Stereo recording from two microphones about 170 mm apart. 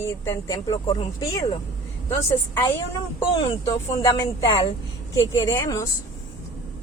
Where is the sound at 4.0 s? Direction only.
25° left (ahead or behind).